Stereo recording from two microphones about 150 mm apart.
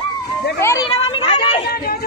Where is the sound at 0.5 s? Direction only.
20° left (ahead or behind).